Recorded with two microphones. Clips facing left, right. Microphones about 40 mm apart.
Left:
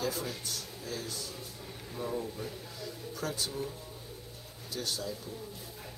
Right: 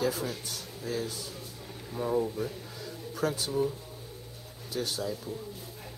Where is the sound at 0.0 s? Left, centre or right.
Centre.